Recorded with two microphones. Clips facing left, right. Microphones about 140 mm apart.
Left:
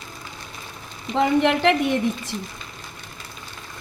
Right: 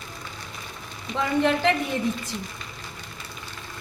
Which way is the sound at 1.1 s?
70° left (ahead or behind).